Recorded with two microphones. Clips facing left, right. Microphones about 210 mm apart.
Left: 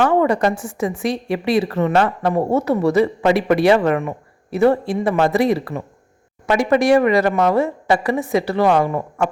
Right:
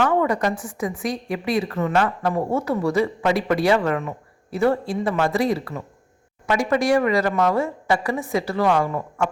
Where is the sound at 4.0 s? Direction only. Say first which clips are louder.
Left 5 dB; 55° left (ahead or behind).